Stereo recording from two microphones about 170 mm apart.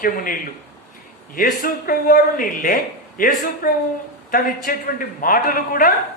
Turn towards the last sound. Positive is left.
turn(degrees=55)  # may be behind; listen again after turning